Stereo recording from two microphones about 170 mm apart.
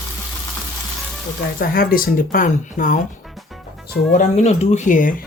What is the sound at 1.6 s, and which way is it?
Speech, 55° left (ahead or behind).